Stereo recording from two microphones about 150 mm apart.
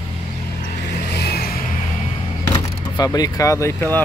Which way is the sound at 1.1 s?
90° left.